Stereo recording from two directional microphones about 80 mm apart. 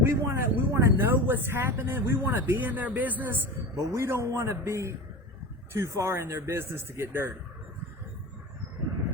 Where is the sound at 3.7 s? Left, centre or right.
Right.